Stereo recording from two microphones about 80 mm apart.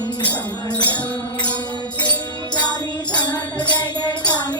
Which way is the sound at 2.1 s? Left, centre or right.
Left.